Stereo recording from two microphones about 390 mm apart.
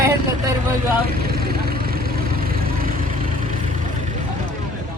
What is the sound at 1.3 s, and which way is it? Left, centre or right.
Vehicle, right.